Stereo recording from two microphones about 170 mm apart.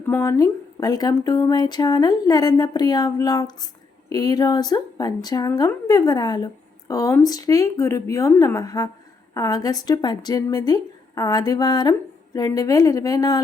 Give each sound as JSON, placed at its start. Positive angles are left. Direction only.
{"t": 0.0, "sound": "a woman's voice", "side_deg": 15}